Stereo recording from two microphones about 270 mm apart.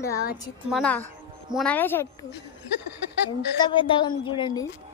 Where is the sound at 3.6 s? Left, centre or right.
Centre.